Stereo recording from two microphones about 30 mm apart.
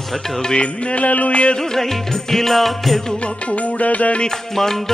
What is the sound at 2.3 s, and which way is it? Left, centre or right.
Music, centre.